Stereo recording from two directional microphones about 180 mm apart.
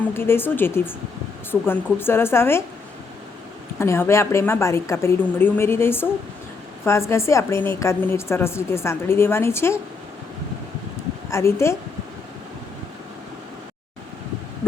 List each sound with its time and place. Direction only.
0.1 s a woman's voice: 15° left (ahead or behind)
3.8 s a woman's voice: 15° left (ahead or behind)
11.3 s a woman's voice: 15° left (ahead or behind)